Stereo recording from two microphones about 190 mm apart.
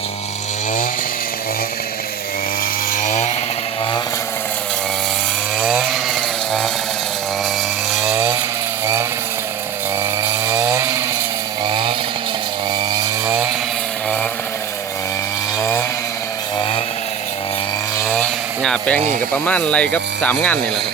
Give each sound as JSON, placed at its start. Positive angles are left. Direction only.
{"t": 2.9, "sound": "chainsaw", "side_deg": 40}
{"t": 5.5, "sound": "chainsaw", "side_deg": -5}
{"t": 8.1, "sound": "chainsaw", "side_deg": -15}
{"t": 10.0, "sound": "chainsaw", "side_deg": -15}
{"t": 11.6, "sound": "chainsaw", "side_deg": -25}
{"t": 13.0, "sound": "chainsaw", "side_deg": -10}
{"t": 18.1, "sound": "a sound", "side_deg": 5}
{"t": 19.3, "sound": "speech", "side_deg": 5}